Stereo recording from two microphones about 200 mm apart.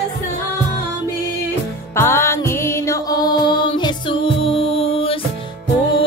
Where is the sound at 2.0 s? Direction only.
10° left (ahead or behind).